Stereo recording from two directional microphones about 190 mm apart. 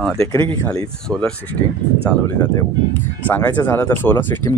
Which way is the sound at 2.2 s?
10° left (ahead or behind).